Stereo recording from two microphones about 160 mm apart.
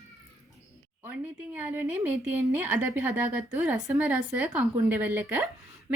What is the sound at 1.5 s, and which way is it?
A woman's voice, 10° right (ahead or behind).